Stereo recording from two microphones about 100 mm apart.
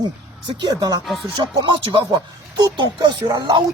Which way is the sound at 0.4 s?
50° right (ahead or behind).